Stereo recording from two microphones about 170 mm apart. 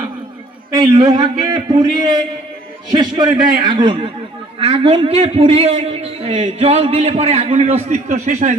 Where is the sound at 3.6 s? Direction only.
30° right (ahead or behind).